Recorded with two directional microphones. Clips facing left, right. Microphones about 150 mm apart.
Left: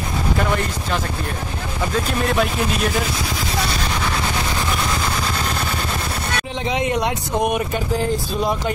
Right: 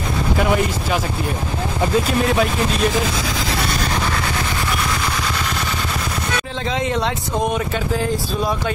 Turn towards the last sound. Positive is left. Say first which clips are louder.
# left 1 dB
turn(degrees=15)  # may be behind; listen again after turning